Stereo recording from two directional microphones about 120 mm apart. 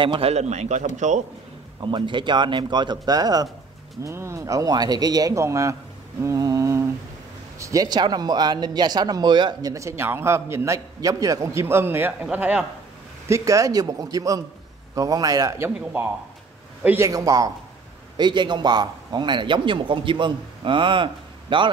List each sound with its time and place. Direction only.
0.0 s a man's voice: 45° right (ahead or behind)
0.3 s a man's voice: 70° right (ahead or behind); by 1.2 s 85° right
1.8 s a man's voice: 40° right (ahead or behind); by 5.8 s 25° right (ahead or behind)
6.2 s mantra: 30° right (ahead or behind)
7.5 s a man's voice: 25° right (ahead or behind)
13.3 s a man's voice: 25° right (ahead or behind)
15.8 s a man's voice: 15° right (ahead or behind); by 21.6 s 45° right (ahead or behind)